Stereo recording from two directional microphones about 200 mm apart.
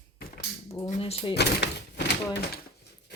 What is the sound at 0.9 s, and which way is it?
Drawer open or close, 30° left (ahead or behind).